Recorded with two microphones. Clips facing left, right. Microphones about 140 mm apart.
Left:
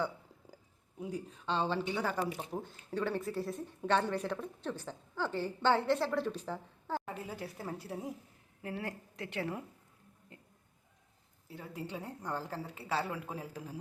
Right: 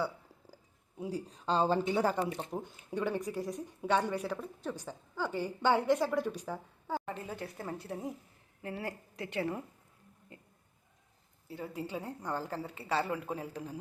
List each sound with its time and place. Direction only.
0.9 s speech: 30° right (ahead or behind)
2.5 s a woman's voice: 15° right (ahead or behind)
7.0 s a woman's voice: 5° left (ahead or behind)
10.3 s a sound: centre (ahead or behind)
11.4 s a woman's voice: centre (ahead or behind)